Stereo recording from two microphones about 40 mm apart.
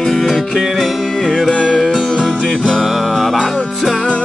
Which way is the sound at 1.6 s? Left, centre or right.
Centre.